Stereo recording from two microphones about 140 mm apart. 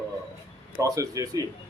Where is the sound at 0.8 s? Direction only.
25° right (ahead or behind).